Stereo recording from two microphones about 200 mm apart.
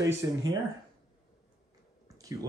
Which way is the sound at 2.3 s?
15° right (ahead or behind).